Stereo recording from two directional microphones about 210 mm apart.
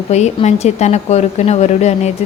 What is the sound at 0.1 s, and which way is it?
A woman's voice, 30° left (ahead or behind).